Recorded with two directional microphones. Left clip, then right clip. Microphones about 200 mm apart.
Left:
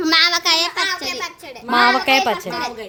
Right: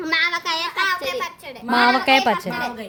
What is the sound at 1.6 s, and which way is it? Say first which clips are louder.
Speech: left 2 dB; 5° right (ahead or behind).